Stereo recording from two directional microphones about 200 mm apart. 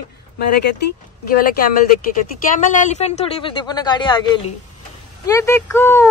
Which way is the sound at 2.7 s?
35° left (ahead or behind).